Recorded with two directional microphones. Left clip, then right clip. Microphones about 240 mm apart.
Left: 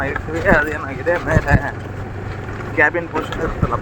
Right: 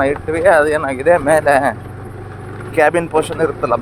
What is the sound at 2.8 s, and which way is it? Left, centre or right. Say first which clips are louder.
Speech: right 3 dB; right.